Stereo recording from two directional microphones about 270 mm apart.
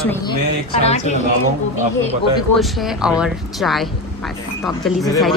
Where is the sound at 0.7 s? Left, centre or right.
Left.